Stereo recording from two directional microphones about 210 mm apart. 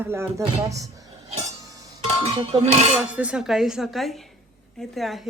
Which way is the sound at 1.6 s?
20° right (ahead or behind).